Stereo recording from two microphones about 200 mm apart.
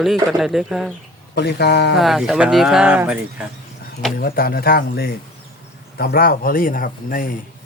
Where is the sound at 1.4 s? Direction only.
55° left (ahead or behind).